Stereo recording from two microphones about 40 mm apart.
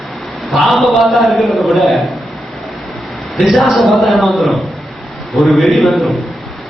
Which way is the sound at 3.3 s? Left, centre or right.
Centre.